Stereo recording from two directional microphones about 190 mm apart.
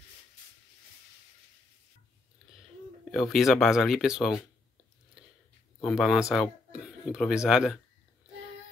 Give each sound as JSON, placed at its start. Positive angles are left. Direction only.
{"t": 3.1, "sound": "speech", "side_deg": 0}
{"t": 5.8, "sound": "speech", "side_deg": 0}